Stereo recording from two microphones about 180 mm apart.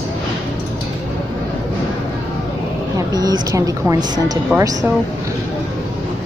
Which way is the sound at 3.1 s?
20° right (ahead or behind).